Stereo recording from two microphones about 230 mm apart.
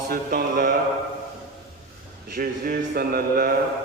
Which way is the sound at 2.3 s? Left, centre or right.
Right.